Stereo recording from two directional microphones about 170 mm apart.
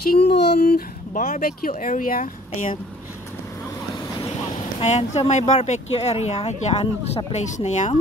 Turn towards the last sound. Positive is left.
turn(degrees=45)  # may be behind; listen again after turning